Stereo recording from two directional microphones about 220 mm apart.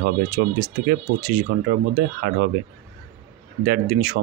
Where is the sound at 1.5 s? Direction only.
40° right (ahead or behind).